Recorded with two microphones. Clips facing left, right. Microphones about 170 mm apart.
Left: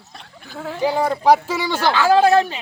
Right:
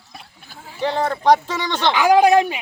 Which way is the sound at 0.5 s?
75° left (ahead or behind).